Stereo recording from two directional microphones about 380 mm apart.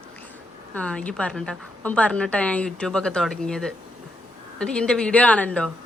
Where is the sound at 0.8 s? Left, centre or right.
Centre.